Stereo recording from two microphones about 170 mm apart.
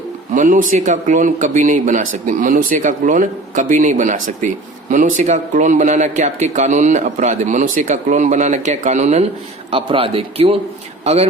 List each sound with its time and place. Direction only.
0.3 s speech: 50° right (ahead or behind)
9.7 s a man's voice: 30° right (ahead or behind)